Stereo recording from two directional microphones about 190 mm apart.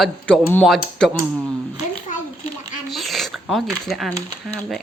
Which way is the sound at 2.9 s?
Centre (ahead or behind).